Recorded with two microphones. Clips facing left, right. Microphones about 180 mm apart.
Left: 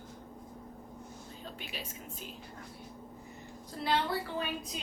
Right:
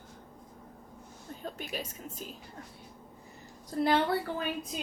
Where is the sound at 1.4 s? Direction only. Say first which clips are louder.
Right 7 dB; 45° right (ahead or behind).